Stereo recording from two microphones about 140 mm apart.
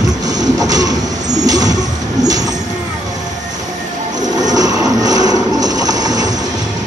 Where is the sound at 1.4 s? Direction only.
25° right (ahead or behind).